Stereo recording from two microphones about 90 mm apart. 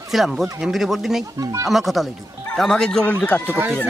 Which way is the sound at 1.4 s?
40° right (ahead or behind).